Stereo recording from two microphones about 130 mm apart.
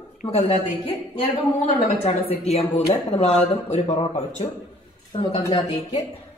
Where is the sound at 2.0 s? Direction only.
55° left (ahead or behind).